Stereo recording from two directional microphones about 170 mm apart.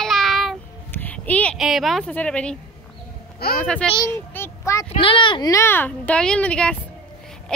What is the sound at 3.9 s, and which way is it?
Speech, 15° left (ahead or behind).